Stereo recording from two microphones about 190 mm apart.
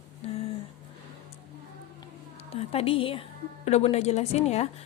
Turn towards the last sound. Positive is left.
turn(degrees=35)  # may be behind; listen again after turning